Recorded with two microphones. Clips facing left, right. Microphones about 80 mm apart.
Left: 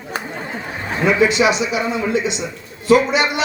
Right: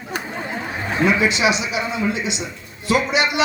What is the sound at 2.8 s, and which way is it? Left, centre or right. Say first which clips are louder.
Speech: left 5 dB; left.